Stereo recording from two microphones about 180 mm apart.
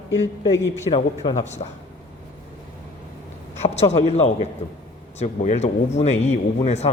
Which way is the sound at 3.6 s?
35° left (ahead or behind).